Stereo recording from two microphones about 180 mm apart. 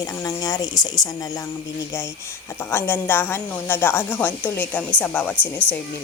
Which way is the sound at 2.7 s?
10° left (ahead or behind).